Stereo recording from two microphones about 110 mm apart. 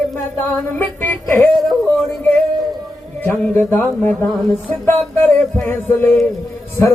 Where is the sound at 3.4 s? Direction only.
20° left (ahead or behind).